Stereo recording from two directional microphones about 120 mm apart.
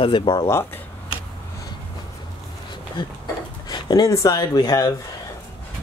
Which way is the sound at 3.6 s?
35° left (ahead or behind).